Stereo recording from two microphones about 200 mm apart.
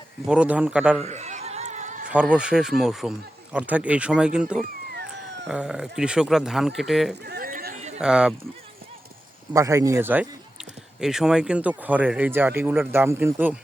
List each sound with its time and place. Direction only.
0.3 s speech: 5° right (ahead or behind)
1.0 s a sound: 35° right (ahead or behind)
2.0 s speech: 5° right (ahead or behind)
7.3 s a sound: 50° right (ahead or behind)
7.9 s speech: 5° right (ahead or behind)
9.5 s speech: 15° right (ahead or behind)